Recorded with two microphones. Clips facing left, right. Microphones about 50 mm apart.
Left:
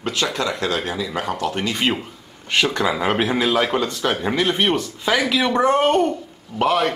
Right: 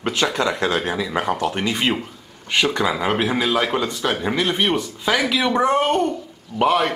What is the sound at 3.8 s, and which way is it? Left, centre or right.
Speech, centre.